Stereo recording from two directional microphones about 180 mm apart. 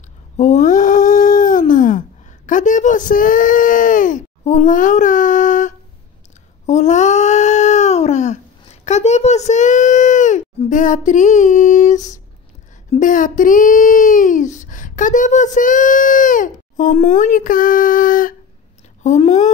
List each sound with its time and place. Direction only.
0.4 s a sound: 40° left (ahead or behind)
8.8 s speech: 40° left (ahead or behind)
19.0 s speech: 40° left (ahead or behind)